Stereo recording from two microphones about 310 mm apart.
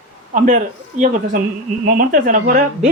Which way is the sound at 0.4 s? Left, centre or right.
Right.